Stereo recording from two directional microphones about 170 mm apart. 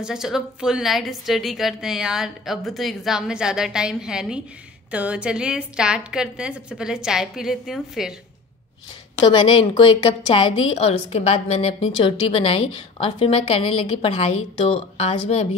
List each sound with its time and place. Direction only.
0.0 s a woman's voice: 5° right (ahead or behind)
9.3 s a woman's voice: 30° left (ahead or behind)